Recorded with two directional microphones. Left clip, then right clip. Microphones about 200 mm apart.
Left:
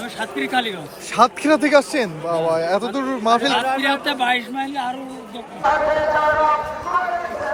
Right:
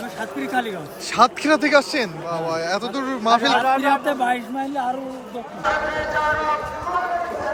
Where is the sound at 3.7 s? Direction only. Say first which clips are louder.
Right 1 dB; 50° right (ahead or behind).